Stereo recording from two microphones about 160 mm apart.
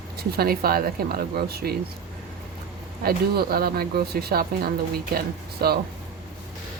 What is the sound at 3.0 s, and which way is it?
Speech, 75° right (ahead or behind).